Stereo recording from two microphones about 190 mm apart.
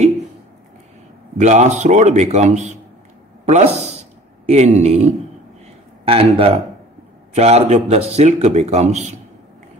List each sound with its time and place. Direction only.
1.4 s speech: 35° right (ahead or behind)
4.0 s a sound: 35° right (ahead or behind)
6.0 s speech: 30° right (ahead or behind)